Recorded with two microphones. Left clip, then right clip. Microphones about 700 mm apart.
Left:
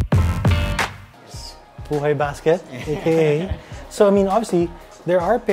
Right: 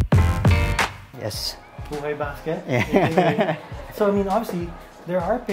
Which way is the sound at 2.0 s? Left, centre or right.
Left.